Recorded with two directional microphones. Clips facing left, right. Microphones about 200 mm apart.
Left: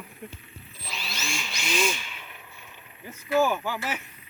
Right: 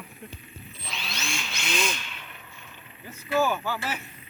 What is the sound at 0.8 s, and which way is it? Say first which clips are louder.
Drill: even; 5° left (ahead or behind).